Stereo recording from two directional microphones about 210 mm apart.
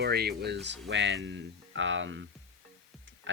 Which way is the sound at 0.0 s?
50° right (ahead or behind).